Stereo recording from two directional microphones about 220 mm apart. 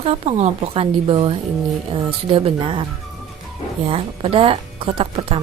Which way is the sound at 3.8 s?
25° right (ahead or behind).